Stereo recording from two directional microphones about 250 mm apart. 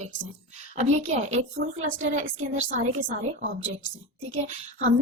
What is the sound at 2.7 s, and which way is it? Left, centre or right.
Speech, right.